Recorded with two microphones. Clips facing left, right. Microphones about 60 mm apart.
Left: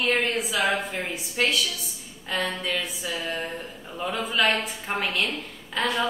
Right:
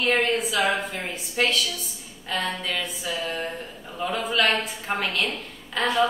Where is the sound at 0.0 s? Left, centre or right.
Centre.